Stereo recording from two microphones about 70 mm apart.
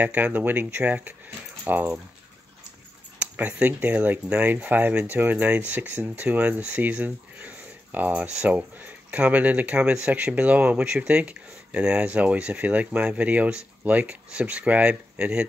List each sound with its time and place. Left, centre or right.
0.0 s speech: right
3.2 s speech: centre